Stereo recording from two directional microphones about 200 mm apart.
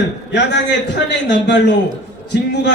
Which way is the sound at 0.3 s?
60° left (ahead or behind).